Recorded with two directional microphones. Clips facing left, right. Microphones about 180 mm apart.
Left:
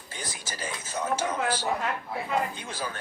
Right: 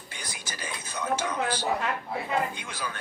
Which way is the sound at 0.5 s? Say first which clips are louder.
Left 3 dB; 25° left (ahead or behind).